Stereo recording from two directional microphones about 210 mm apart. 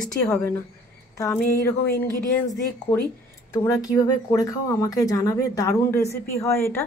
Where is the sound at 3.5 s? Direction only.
15° left (ahead or behind).